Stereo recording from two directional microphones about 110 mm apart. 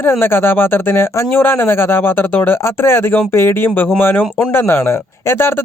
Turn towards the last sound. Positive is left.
turn(degrees=20)  # may be behind; listen again after turning